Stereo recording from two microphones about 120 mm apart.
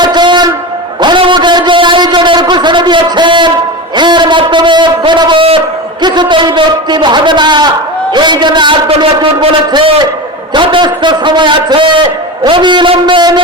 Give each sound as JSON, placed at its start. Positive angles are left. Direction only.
{"t": 0.0, "sound": "a sound", "side_deg": -40}
{"t": 8.1, "sound": "a man's voice", "side_deg": -40}
{"t": 10.5, "sound": "a man's voice", "side_deg": -40}